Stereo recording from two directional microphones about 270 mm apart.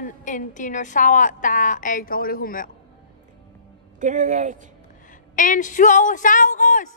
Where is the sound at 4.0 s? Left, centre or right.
Right.